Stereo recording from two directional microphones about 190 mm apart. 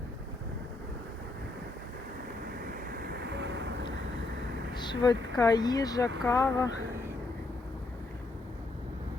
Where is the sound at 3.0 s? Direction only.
60° right (ahead or behind).